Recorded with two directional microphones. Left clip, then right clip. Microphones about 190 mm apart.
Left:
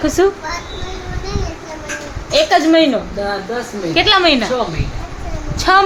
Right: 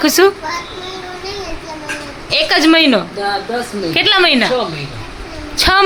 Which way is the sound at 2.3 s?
15° right (ahead or behind).